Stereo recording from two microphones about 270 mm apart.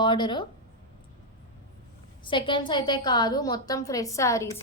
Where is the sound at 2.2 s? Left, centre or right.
Centre.